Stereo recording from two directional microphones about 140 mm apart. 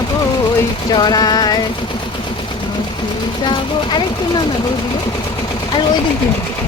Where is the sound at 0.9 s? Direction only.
30° left (ahead or behind).